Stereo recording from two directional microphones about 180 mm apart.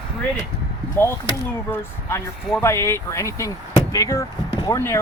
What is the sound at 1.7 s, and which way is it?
Speech, 15° left (ahead or behind).